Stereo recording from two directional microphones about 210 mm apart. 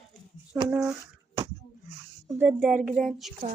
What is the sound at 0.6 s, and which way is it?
Speech, 15° right (ahead or behind).